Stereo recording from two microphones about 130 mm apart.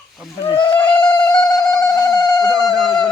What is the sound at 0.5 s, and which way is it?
Insect, 40° left (ahead or behind).